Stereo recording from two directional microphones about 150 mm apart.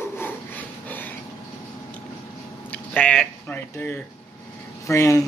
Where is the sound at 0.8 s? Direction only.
10° left (ahead or behind).